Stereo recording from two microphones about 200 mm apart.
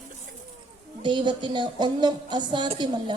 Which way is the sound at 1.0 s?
25° right (ahead or behind).